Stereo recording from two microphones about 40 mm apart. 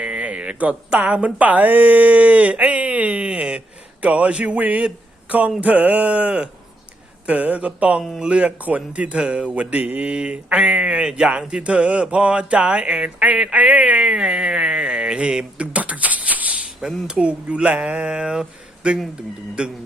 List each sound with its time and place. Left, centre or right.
0.0 s speech: right
4.0 s speech: right
10.2 s speech: right
15.6 s a sound: right
16.6 s speech: right